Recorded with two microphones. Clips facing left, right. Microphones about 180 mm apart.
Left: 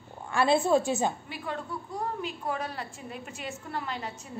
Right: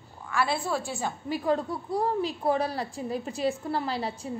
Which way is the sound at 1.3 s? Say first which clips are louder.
Right 9 dB; 35° right (ahead or behind).